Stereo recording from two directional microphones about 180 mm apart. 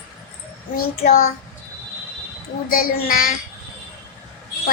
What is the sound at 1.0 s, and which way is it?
Speech, 50° left (ahead or behind).